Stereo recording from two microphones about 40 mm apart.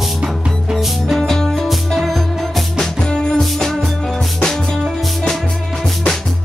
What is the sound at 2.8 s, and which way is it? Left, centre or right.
Music, centre.